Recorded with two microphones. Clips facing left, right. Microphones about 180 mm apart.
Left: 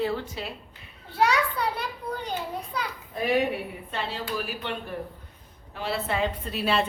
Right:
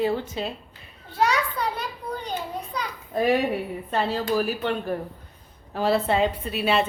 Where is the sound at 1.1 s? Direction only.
10° left (ahead or behind).